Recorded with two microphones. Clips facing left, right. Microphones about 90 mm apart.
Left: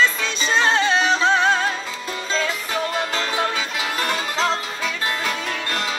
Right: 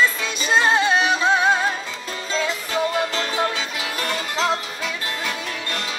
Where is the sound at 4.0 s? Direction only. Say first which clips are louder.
Even; 25° left (ahead or behind).